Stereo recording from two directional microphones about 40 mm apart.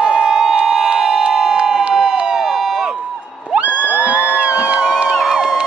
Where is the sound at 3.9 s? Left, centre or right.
Right.